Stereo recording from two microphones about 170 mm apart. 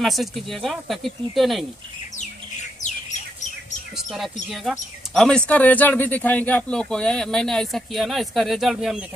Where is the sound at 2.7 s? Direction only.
45° left (ahead or behind).